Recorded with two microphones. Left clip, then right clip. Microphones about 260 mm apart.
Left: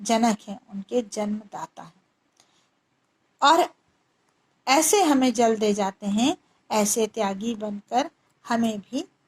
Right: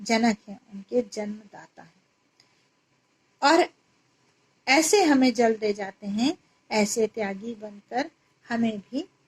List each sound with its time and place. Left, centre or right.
0.0 s a woman's voice: left
3.3 s a woman's voice: left